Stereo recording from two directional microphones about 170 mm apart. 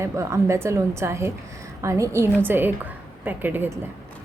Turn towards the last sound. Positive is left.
turn(degrees=-10)  # may be behind; listen again after turning